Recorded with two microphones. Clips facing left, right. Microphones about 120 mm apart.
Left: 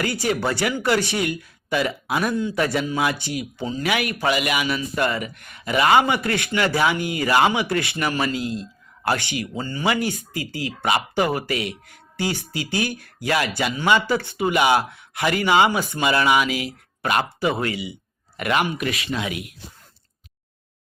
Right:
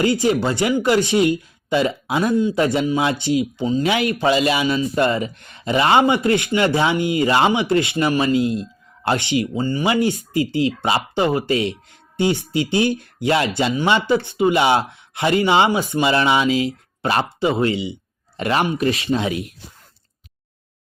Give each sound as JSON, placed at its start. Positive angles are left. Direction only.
{"t": 0.0, "sound": "speech", "side_deg": -20}